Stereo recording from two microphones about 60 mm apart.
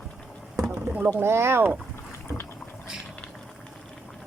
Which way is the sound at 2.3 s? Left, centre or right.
Centre.